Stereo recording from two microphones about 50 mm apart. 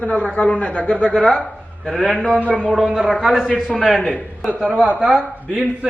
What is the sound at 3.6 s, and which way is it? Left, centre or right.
Speech, centre.